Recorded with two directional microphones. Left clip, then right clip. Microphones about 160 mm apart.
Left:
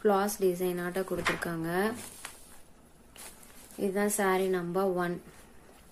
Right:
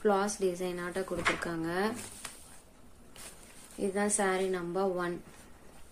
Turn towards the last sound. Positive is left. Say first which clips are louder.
# left 2 dB
turn(degrees=25)  # may be behind; listen again after turning